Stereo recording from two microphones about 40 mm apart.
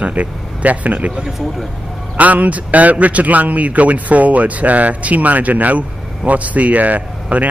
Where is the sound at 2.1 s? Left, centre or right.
Right.